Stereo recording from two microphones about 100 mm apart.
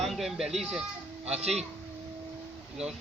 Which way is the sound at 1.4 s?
90° right.